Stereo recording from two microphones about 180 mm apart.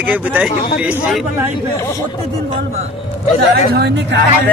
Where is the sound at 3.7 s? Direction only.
65° right (ahead or behind).